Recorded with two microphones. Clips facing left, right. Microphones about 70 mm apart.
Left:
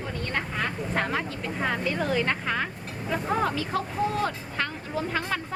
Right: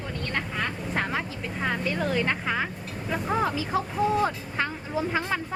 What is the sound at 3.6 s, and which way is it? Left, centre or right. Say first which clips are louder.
Speech: right 1 dB; centre.